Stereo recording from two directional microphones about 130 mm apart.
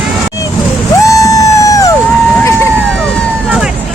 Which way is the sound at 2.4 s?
20° left (ahead or behind).